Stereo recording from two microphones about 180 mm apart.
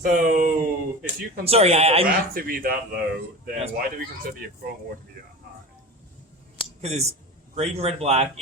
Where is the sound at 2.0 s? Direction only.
55° right (ahead or behind).